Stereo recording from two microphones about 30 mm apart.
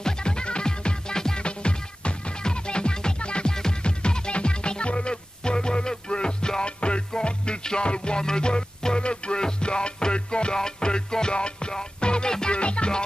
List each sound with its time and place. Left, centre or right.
0.0 s music: left
1.4 s music: left
12.5 s music: left